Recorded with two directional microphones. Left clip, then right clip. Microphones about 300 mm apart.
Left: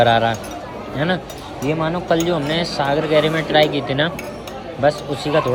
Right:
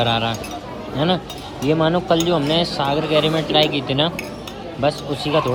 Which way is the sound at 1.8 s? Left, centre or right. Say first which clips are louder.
Right 1 dB; right.